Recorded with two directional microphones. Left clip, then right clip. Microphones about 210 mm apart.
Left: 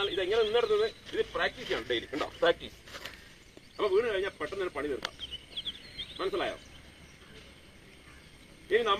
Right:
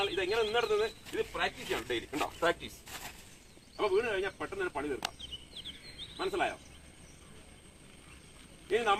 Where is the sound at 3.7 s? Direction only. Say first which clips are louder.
Left 2 dB; 20° right (ahead or behind).